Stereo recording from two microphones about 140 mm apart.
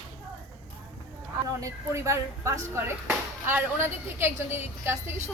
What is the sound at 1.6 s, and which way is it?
A woman's voice, 20° right (ahead or behind).